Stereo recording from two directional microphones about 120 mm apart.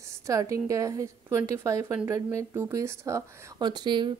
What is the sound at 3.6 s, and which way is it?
Speech, 35° right (ahead or behind).